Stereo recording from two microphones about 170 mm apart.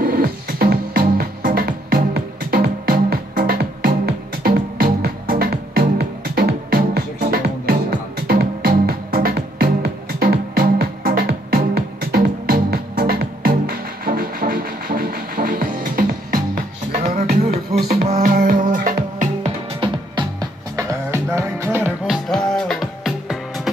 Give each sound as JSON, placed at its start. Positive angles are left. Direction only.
{"t": 0.0, "sound": "music", "side_deg": -60}
{"t": 17.0, "sound": "music", "side_deg": -40}
{"t": 17.7, "sound": "music", "side_deg": -65}
{"t": 18.0, "sound": "music", "side_deg": -50}
{"t": 19.8, "sound": "music", "side_deg": -25}
{"t": 22.0, "sound": "music", "side_deg": 0}